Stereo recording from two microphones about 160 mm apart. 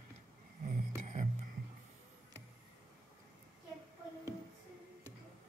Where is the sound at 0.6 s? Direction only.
50° right (ahead or behind).